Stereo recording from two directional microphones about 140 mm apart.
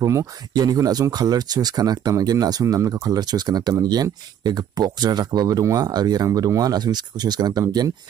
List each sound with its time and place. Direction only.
0.0 s speech: 25° right (ahead or behind)